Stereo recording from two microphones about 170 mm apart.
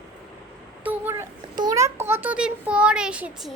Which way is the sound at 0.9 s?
15° right (ahead or behind).